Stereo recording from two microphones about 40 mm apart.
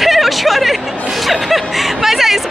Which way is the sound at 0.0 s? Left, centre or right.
Centre.